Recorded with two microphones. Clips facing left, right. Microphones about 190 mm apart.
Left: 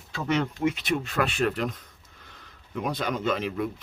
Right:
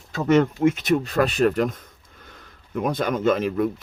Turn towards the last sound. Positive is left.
turn(degrees=-45)  # may be behind; listen again after turning